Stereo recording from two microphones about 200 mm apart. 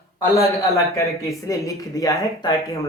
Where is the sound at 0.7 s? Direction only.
15° left (ahead or behind).